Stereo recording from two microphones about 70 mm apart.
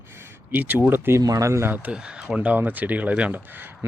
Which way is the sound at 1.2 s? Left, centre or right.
Right.